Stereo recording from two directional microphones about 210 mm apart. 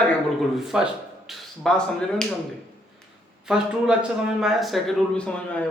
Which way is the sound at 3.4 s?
5° right (ahead or behind).